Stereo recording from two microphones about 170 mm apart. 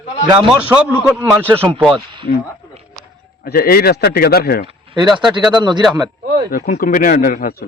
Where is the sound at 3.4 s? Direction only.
60° left (ahead or behind).